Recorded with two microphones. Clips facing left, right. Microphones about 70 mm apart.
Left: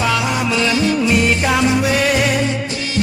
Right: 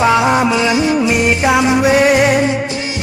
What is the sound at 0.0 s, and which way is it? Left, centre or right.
Music, right.